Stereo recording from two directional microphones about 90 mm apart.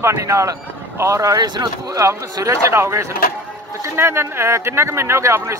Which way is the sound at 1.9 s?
35° right (ahead or behind).